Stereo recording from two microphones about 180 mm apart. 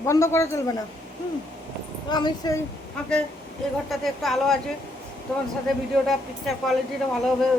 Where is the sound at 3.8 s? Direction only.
Centre (ahead or behind).